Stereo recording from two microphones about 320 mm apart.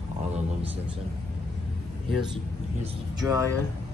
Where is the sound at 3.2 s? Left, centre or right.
Centre.